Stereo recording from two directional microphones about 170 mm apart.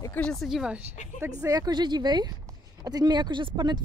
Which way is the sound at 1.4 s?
20° right (ahead or behind).